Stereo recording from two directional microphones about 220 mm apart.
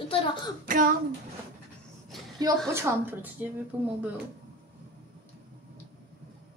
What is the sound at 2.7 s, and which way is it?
Speech, 10° right (ahead or behind).